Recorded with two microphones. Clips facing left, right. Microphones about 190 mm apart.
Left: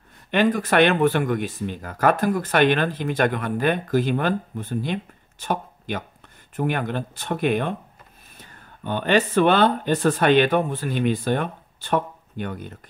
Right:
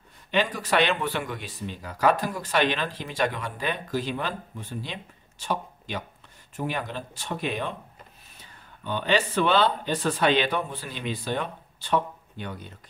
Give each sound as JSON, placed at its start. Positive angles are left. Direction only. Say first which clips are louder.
{"t": 0.3, "sound": "speech", "louder": "left 5 dB", "side_deg": 55}